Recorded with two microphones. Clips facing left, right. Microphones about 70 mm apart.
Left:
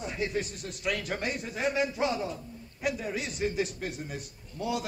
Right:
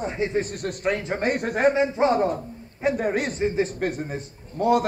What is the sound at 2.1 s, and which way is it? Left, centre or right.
A man's voice, right.